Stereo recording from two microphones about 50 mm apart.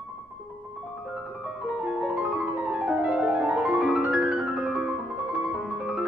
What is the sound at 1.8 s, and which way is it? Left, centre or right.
Piano, right.